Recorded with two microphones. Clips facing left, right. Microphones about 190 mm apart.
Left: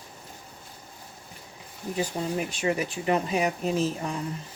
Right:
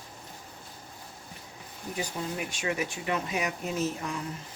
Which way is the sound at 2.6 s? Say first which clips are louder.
Left 4 dB; 35° left (ahead or behind).